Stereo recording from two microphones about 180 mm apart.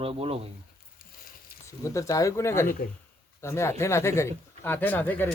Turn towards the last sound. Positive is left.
turn(degrees=10)  # may be behind; listen again after turning